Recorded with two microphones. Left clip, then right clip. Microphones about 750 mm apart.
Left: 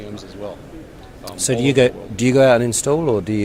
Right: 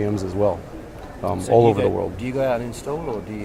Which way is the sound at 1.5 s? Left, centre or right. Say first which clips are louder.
Left 1 dB; left.